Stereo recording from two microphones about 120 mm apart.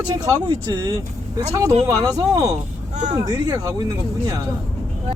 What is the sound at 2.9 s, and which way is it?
Speech, 80° right.